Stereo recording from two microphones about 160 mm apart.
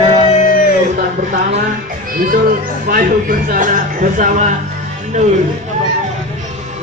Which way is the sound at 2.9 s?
60° right (ahead or behind).